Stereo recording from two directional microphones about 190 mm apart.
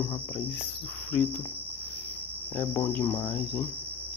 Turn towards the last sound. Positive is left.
turn(degrees=10)  # may be behind; listen again after turning